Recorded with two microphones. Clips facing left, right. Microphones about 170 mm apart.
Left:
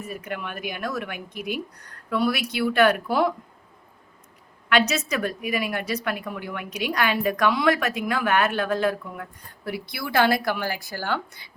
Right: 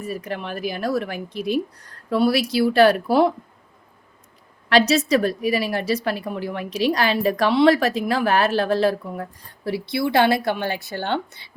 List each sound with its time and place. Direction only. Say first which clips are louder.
0.0 s a woman's voice: right 4 dB; 35° right (ahead or behind)
4.7 s a woman's voice: right 6 dB; 35° right (ahead or behind)